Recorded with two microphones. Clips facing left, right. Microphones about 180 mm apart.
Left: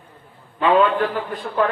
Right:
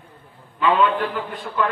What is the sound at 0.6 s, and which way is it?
Speech, 40° left (ahead or behind).